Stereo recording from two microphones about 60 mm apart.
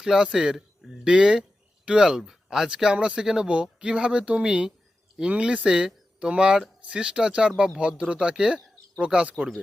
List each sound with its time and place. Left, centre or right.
0.0 s speech: centre